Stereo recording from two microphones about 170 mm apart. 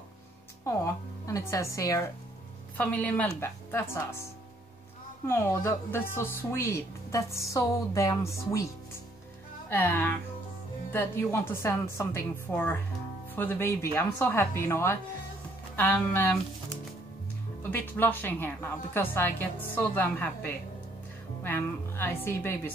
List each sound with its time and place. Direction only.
0.7 s speech: 20° left (ahead or behind)
5.2 s speech: 15° left (ahead or behind)
9.7 s speech: 10° left (ahead or behind)
17.6 s speech: 10° left (ahead or behind)